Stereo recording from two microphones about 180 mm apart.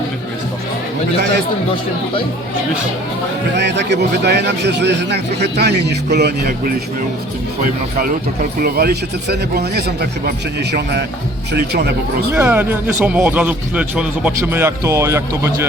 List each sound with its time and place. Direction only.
3.6 s a man's voice: 75° right (ahead or behind)
7.6 s a man's voice: 50° right (ahead or behind)
12.3 s a man's voice: 10° right (ahead or behind)